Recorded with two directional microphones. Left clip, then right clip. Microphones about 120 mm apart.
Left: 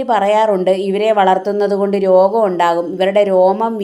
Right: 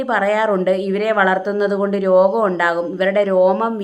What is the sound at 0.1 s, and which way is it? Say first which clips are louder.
A woman's voice: left 4 dB; 15° left (ahead or behind).